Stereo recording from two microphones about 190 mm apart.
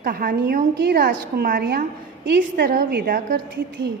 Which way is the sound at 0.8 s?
60° right (ahead or behind).